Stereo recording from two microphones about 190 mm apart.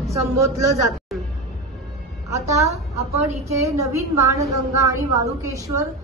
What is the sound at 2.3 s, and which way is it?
A woman's voice, 15° right (ahead or behind).